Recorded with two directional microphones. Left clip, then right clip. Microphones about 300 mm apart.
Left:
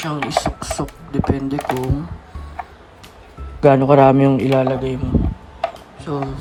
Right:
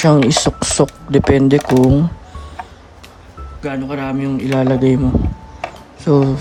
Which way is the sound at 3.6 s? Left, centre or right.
Centre.